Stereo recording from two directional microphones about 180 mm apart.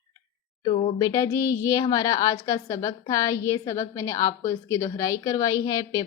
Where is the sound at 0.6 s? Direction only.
30° left (ahead or behind).